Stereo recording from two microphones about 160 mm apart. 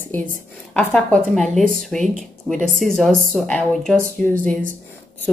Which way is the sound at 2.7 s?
60° right (ahead or behind).